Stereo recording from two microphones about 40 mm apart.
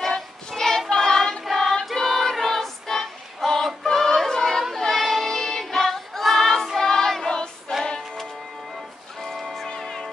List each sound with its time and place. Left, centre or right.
0.0 s child singing: centre
1.4 s choir: centre
2.0 s music: centre
9.2 s music: centre
9.7 s music: centre